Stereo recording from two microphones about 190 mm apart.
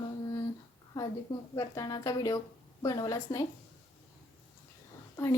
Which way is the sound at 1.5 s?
15° left (ahead or behind).